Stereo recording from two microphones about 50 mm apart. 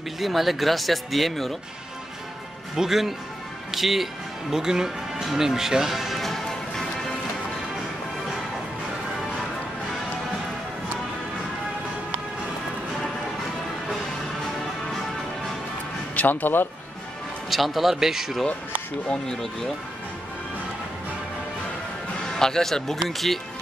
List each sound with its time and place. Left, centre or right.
0.2 s speech: centre
2.7 s speech: centre
5.2 s music: centre
16.2 s speech: left
17.5 s speech: centre
22.4 s a man's voice: centre